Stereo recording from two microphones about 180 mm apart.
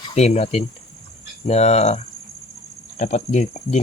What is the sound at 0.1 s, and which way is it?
Speech, 35° left (ahead or behind).